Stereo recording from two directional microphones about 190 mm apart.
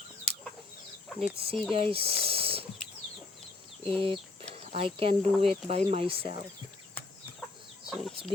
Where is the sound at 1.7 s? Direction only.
30° right (ahead or behind).